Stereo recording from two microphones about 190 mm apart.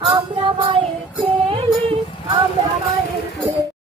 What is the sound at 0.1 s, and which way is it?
Music, 25° right (ahead or behind).